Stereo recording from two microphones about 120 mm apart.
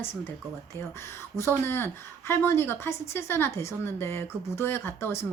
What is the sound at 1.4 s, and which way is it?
A woman's voice, 20° left (ahead or behind).